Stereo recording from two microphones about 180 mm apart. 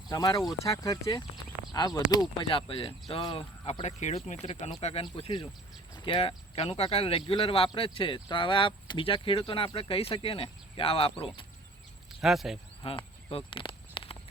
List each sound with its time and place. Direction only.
0.1 s speech: 20° left (ahead or behind)
12.2 s speech: centre (ahead or behind)
12.8 s a sound: 30° left (ahead or behind)